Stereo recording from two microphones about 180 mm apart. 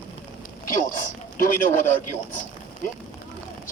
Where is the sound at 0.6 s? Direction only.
50° left (ahead or behind).